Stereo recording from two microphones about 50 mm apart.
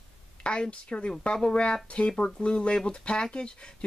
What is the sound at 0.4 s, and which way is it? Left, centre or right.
Speech, centre.